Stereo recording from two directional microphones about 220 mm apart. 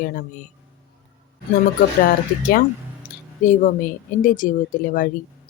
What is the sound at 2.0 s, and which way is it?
Speech, 40° left (ahead or behind).